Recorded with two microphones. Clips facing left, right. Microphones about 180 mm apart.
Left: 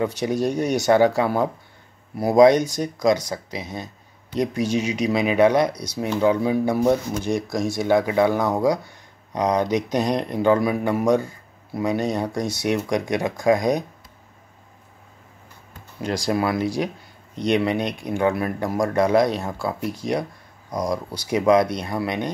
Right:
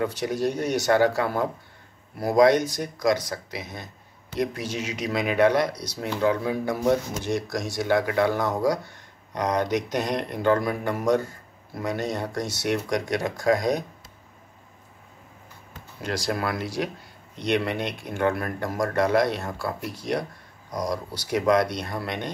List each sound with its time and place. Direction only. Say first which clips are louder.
0.0 s speech: left 3 dB; 15° left (ahead or behind)
16.0 s speech: left 5 dB; 15° left (ahead or behind)